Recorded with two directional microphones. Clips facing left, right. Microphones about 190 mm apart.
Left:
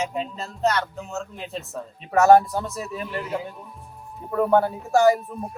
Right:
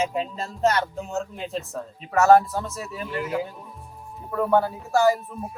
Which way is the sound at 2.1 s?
15° left (ahead or behind).